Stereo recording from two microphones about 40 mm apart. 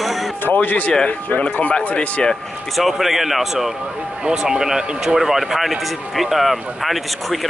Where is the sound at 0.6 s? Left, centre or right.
Left.